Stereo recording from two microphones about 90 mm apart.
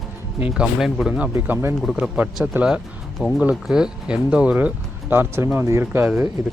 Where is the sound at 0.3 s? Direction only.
15° right (ahead or behind); by 2.0 s 5° left (ahead or behind).